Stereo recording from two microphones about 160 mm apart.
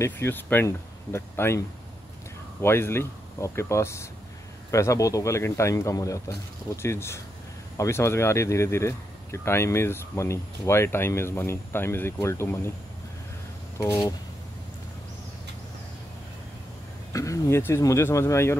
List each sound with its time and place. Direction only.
0.0 s speech: 15° left (ahead or behind)
2.6 s a man's voice: 15° left (ahead or behind)
13.7 s a man's voice: 20° left (ahead or behind)
17.1 s speech: 20° left (ahead or behind)